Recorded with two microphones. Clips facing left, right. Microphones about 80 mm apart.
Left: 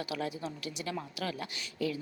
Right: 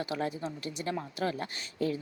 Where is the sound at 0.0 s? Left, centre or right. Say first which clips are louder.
Right 3 dB; right.